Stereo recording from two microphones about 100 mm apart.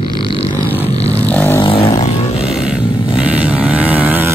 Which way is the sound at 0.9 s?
90° left.